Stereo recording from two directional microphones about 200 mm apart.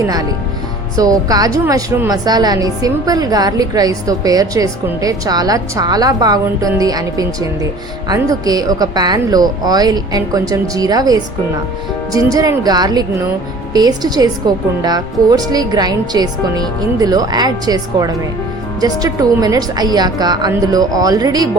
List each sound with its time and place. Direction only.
0.9 s a woman's voice: 20° right (ahead or behind)